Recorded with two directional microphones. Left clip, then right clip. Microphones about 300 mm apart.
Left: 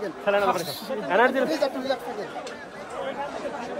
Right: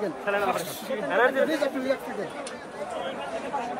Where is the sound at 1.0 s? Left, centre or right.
Left.